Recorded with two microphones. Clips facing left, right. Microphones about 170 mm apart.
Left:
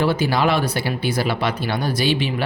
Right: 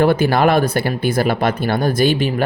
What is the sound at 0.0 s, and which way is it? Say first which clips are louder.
Speech: right 5 dB; 55° right (ahead or behind).